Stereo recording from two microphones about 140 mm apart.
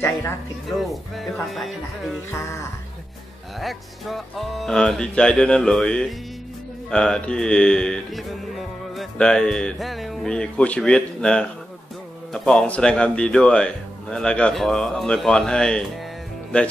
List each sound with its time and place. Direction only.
0.7 s speech: centre (ahead or behind)
3.5 s speech: centre (ahead or behind)